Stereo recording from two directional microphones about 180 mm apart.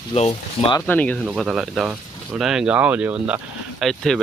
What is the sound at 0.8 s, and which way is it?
Speech, 10° left (ahead or behind).